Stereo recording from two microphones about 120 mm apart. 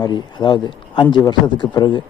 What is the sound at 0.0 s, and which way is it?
Speech, 35° left (ahead or behind).